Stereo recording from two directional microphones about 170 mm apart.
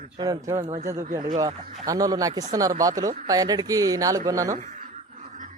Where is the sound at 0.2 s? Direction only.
20° right (ahead or behind).